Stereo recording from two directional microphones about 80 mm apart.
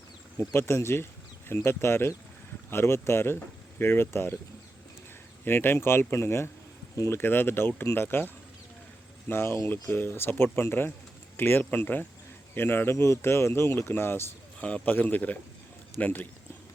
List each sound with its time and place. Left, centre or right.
0.3 s speech: left
5.5 s speech: left
9.3 s speech: left
14.6 s speech: centre